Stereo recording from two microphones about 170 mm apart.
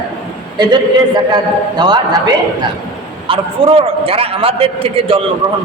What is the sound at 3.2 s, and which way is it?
A man's voice, 30° right (ahead or behind).